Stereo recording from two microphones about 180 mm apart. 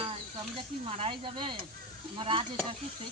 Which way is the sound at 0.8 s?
30° right (ahead or behind).